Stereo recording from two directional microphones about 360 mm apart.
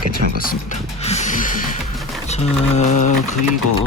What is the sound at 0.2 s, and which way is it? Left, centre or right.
Speech, right.